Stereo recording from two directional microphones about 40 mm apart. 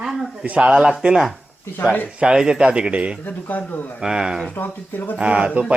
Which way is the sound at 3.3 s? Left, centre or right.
Left.